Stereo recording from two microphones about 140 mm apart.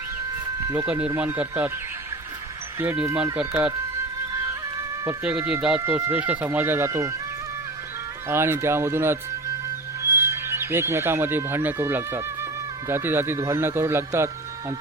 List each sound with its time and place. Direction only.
0.9 s speech: 10° right (ahead or behind)
2.7 s speech: 15° right (ahead or behind)
5.0 s speech: 10° right (ahead or behind)
8.3 s speech: 15° right (ahead or behind)